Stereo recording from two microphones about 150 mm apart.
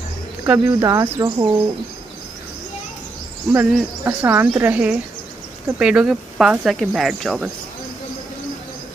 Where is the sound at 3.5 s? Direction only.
15° right (ahead or behind).